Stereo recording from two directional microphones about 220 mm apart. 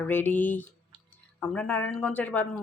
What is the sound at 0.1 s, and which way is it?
Speech, 10° left (ahead or behind).